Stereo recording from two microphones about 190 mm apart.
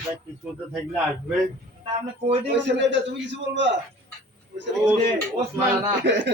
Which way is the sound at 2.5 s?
65° right (ahead or behind).